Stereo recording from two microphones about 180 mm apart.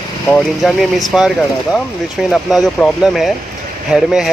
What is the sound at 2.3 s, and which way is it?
Speech, centre (ahead or behind).